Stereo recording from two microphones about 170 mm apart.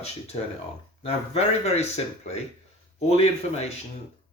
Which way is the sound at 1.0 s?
40° left (ahead or behind).